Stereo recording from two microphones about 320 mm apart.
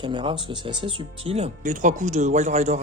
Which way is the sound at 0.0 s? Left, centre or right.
Centre.